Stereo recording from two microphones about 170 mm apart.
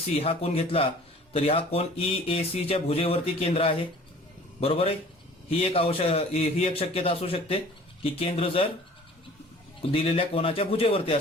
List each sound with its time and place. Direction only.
0.2 s speech: 35° left (ahead or behind)
9.9 s speech: 35° left (ahead or behind)